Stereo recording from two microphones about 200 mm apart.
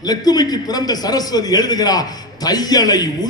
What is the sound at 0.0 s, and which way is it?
A man's voice, 20° left (ahead or behind).